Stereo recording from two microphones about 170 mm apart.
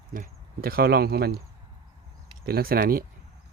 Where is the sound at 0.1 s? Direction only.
55° right (ahead or behind).